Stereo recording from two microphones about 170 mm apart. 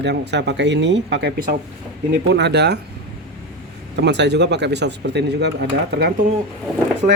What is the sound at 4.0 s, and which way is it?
Speech, 90° right.